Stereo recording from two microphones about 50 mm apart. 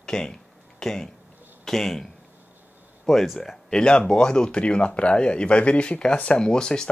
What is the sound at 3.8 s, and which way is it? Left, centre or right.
Speech, centre.